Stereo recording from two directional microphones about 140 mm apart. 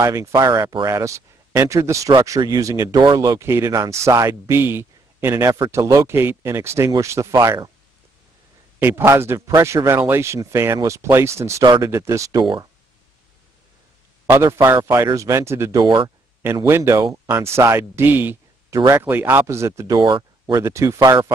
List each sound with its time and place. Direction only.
0.0 s speech: 20° right (ahead or behind)
8.7 s speech: 15° right (ahead or behind)
14.2 s speech: 15° right (ahead or behind)
20.0 s speech: 35° right (ahead or behind)
20.6 s speech: 20° right (ahead or behind)